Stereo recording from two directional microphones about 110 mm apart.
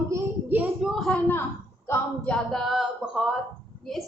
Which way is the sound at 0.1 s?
15° right (ahead or behind).